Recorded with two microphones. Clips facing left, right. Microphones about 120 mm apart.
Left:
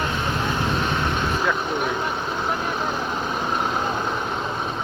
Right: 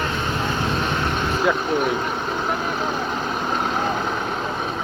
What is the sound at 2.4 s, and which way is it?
Vehicle, 5° right (ahead or behind).